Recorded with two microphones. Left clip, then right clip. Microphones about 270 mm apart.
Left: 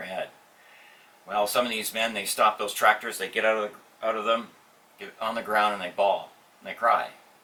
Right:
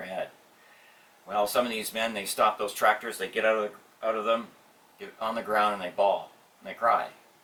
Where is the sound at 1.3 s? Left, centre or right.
Centre.